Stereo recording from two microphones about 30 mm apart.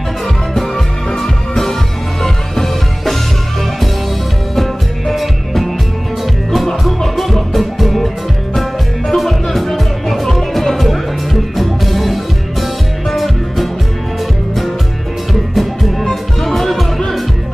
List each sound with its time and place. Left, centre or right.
0.6 s music: centre
4.6 s music: centre
7.2 s music: centre
15.5 s music: centre